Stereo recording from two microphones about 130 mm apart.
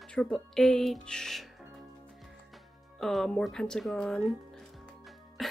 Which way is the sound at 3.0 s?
5° left (ahead or behind).